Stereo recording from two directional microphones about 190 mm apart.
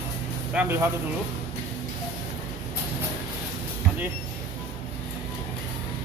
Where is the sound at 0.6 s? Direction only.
10° right (ahead or behind).